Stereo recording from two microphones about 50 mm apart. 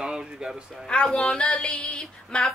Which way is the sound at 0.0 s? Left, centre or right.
Centre.